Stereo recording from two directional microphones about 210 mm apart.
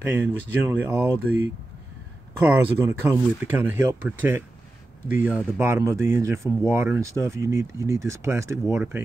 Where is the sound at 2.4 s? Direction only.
10° right (ahead or behind).